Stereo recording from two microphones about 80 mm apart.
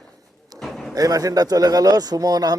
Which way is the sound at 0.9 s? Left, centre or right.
Right.